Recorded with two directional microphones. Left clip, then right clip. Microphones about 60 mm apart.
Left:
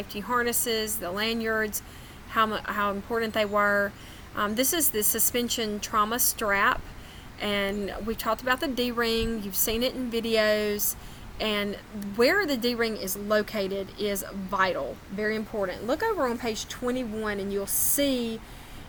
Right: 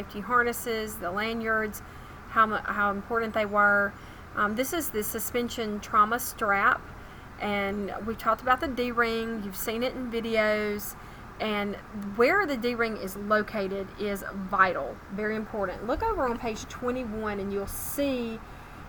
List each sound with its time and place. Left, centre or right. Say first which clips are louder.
0.1 s a woman's voice: right 2 dB; centre